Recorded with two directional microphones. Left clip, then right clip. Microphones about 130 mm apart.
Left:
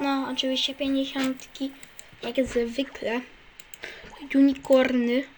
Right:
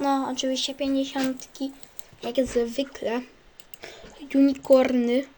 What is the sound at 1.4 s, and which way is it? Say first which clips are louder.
Speech: even; 80° right.